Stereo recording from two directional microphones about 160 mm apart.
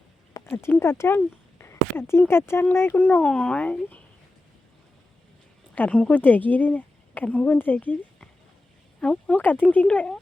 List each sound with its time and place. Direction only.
0.4 s speech: 15° left (ahead or behind)
5.7 s speech: 10° left (ahead or behind)